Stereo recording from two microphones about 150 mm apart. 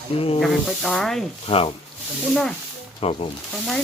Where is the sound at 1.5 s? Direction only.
35° left (ahead or behind).